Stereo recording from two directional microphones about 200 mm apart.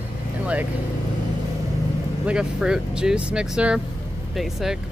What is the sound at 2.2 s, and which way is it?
Speech, 5° right (ahead or behind).